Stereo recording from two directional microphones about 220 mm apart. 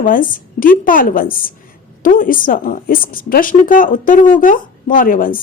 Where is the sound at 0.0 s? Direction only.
40° left (ahead or behind).